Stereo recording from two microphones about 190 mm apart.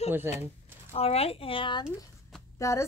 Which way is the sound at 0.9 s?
30° left (ahead or behind).